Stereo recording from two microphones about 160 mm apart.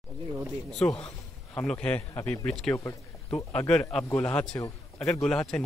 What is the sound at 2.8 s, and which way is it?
Speech, 20° left (ahead or behind).